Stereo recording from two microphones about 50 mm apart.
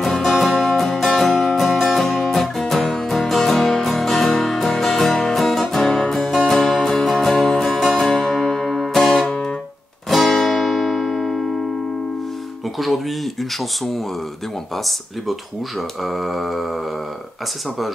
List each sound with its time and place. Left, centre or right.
0.0 s music: centre
9.3 s music: centre
10.0 s music: centre
12.7 s a sound: centre
16.0 s mantra: centre